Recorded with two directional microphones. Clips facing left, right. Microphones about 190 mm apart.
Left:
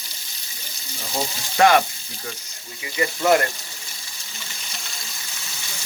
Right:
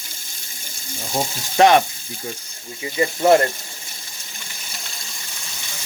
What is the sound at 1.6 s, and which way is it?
Speech, 25° right (ahead or behind).